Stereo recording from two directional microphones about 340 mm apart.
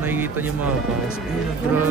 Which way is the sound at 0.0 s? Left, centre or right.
Centre.